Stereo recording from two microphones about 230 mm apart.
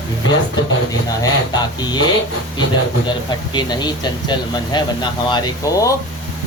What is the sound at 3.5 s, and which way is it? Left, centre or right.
Speech, centre.